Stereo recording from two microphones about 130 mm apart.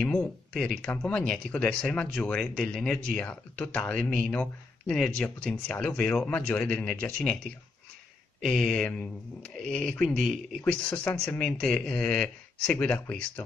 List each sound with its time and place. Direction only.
0.0 s speech: 10° left (ahead or behind)